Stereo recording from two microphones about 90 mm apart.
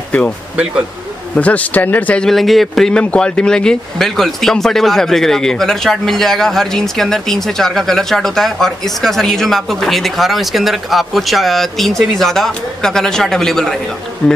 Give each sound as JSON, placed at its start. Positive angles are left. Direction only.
{"t": 1.3, "sound": "speech", "side_deg": 15}
{"t": 2.2, "sound": "speech", "side_deg": 0}